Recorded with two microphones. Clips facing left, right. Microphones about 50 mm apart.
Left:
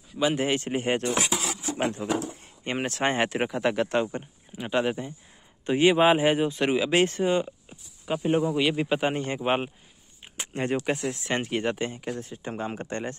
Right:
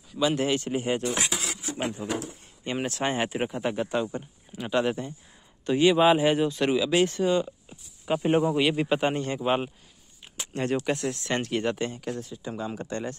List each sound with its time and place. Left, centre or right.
0.2 s speech: left
0.6 s speech: left
1.8 s speech: left
2.6 s speech: left
3.3 s speech: left
4.6 s speech: centre
5.7 s speech: left
8.2 s speech: right
8.5 s a man's voice: centre
9.3 s speech: left
10.3 s a sound: left
10.8 s speech: centre
12.2 s speech: left